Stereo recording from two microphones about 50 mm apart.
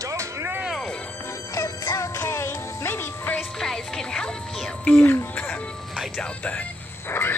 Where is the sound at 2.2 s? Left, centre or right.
Left.